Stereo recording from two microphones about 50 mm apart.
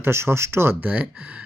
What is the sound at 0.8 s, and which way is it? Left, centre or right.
Speech, right.